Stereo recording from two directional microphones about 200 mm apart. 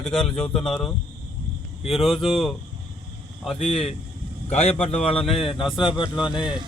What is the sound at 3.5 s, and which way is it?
Speech, 30° left (ahead or behind).